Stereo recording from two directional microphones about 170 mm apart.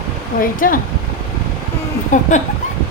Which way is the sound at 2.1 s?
50° left (ahead or behind).